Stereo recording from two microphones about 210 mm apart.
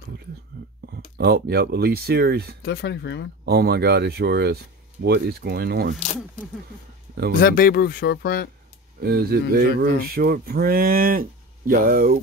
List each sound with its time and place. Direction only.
1.1 s speech: 50° right (ahead or behind)
2.6 s speech: 50° left (ahead or behind)
3.4 s speech: 50° right (ahead or behind)
7.3 s speech: 45° left (ahead or behind)
9.0 s speech: 50° right (ahead or behind)